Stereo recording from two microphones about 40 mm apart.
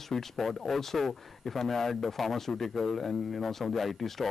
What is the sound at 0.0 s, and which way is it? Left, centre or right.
Speech, centre.